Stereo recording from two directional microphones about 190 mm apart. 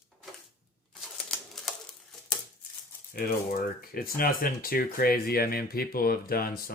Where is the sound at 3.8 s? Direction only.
50° left (ahead or behind).